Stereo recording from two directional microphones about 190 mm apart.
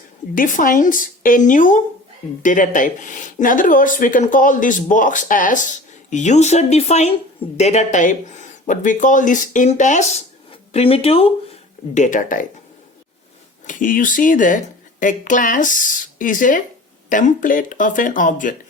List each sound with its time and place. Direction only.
0.3 s speech: 45° left (ahead or behind)
11.9 s speech: 40° left (ahead or behind)
13.7 s speech: 45° left (ahead or behind)